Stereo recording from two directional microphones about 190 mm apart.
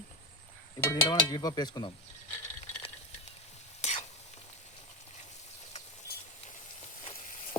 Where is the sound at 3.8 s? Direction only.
35° left (ahead or behind).